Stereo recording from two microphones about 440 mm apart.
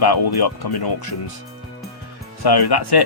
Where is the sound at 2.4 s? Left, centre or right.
Left.